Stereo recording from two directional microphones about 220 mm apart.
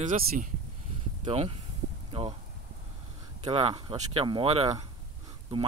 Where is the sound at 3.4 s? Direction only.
25° right (ahead or behind).